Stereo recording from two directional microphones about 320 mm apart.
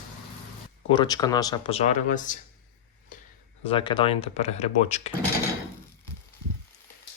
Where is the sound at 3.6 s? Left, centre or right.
Centre.